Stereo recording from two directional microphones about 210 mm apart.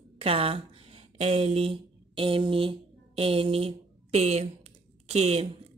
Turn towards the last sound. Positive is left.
turn(degrees=-30)  # may be behind; listen again after turning